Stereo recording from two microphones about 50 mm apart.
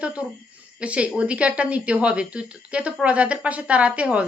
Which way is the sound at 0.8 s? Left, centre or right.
Right.